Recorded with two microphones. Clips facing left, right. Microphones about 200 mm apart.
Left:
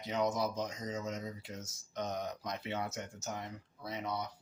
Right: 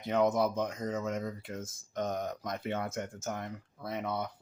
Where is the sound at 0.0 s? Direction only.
55° right (ahead or behind).